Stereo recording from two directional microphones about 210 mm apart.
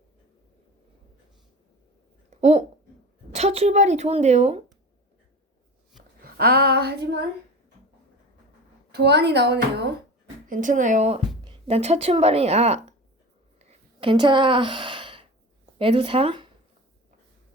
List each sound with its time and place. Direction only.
2.3 s a woman's voice: 30° right (ahead or behind)
6.2 s a woman's voice: 45° right (ahead or behind)
8.9 s a woman's voice: 50° right (ahead or behind)
10.5 s a woman's voice: 40° right (ahead or behind)
13.6 s sigh: 30° right (ahead or behind)
15.8 s a woman's voice: 25° right (ahead or behind)